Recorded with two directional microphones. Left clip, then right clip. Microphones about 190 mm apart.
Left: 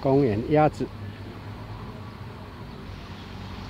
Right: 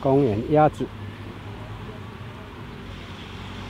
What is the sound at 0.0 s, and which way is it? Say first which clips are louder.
Speech: right 2 dB; centre (ahead or behind).